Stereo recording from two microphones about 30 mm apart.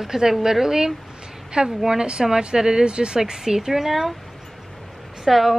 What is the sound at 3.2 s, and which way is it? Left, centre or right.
Speech, centre.